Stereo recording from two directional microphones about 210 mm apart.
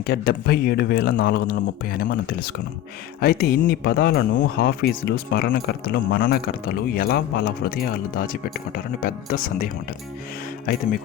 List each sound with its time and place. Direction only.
0.0 s speech: 50° left (ahead or behind)